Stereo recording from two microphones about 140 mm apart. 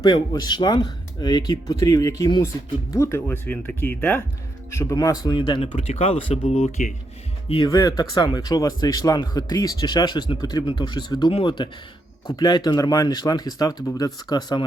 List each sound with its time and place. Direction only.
0.0 s speech: 30° left (ahead or behind); by 6.9 s 55° left (ahead or behind)
7.4 s speech: 40° left (ahead or behind)
7.7 s speech: 30° left (ahead or behind)